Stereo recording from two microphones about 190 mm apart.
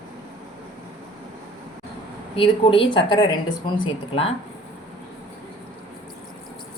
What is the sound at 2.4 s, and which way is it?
Speech, 25° left (ahead or behind).